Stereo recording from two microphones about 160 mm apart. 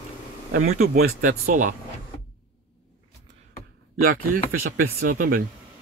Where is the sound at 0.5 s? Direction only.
65° right (ahead or behind).